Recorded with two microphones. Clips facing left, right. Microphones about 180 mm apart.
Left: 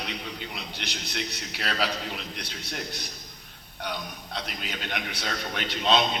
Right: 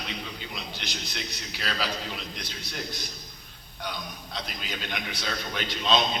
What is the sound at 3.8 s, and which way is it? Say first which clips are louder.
A man's voice: left 2 dB; 65° left (ahead or behind).